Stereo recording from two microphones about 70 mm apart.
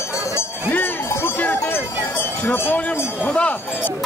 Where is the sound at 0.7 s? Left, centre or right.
Left.